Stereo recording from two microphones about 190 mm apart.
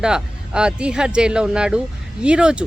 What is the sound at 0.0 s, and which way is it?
Speech, 5° right (ahead or behind).